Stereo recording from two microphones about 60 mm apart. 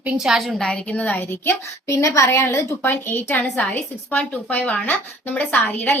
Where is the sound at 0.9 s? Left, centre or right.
Left.